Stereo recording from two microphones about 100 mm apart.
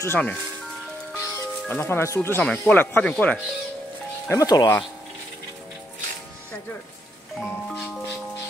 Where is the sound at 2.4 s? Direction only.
5° left (ahead or behind).